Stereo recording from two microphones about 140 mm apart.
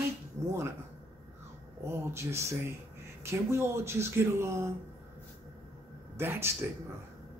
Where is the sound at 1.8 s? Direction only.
20° right (ahead or behind).